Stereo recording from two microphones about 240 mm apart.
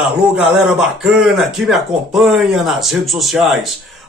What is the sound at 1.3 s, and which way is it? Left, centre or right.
Speech, centre.